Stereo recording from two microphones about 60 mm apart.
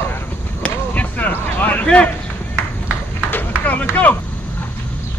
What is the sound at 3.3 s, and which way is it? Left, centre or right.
Run, left.